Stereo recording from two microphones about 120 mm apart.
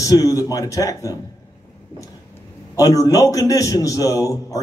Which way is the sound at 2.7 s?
30° left (ahead or behind).